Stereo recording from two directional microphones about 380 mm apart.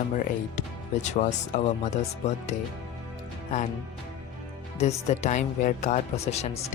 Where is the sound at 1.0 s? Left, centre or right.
Centre.